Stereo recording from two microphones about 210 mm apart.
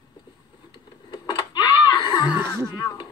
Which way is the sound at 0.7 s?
20° left (ahead or behind).